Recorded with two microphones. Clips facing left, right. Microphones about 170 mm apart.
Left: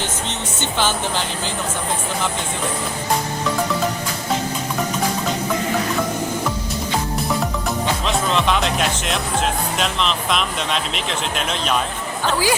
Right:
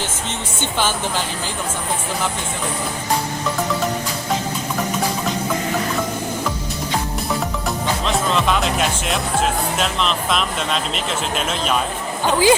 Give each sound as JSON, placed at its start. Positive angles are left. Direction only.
{"t": 8.0, "sound": "speech", "side_deg": 0}
{"t": 12.2, "sound": "speech", "side_deg": -20}